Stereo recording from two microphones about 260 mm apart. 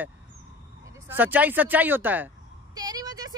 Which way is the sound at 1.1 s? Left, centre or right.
Centre.